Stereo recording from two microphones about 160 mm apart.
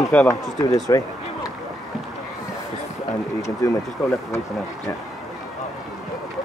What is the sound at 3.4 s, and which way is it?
Speech, 15° left (ahead or behind).